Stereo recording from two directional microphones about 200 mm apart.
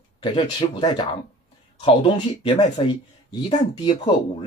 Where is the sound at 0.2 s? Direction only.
25° left (ahead or behind).